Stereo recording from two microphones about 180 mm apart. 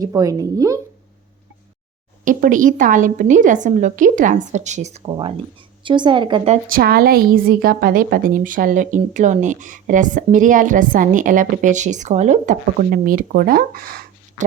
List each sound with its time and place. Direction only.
0.0 s a woman's voice: 20° right (ahead or behind)
2.2 s a woman's voice: 45° right (ahead or behind)
5.0 s a woman's voice: 25° right (ahead or behind)
6.7 s a woman's voice: 55° right (ahead or behind)